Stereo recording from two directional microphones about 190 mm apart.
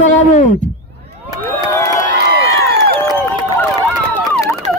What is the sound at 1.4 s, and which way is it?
Crowd, 15° left (ahead or behind).